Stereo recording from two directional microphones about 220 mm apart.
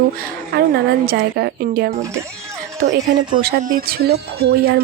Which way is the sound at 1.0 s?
45° right (ahead or behind).